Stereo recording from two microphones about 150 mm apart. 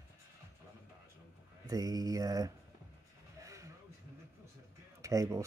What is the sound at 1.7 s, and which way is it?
Speech, 25° right (ahead or behind).